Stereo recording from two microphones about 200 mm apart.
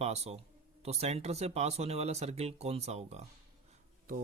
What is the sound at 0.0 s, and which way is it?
Speech, 30° right (ahead or behind).